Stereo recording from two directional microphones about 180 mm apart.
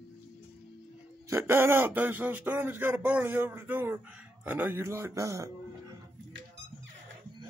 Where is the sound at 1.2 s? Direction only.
15° right (ahead or behind).